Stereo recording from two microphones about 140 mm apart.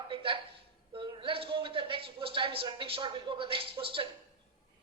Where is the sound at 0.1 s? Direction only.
35° right (ahead or behind).